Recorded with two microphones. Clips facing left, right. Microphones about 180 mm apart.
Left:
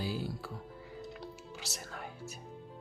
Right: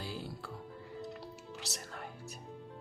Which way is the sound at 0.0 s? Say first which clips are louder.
Left 5 dB; 5° left (ahead or behind).